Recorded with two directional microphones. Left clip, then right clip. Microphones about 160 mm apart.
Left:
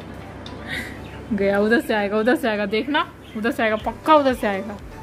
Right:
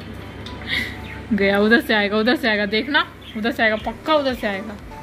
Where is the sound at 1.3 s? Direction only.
5° left (ahead or behind); by 3.7 s 25° left (ahead or behind).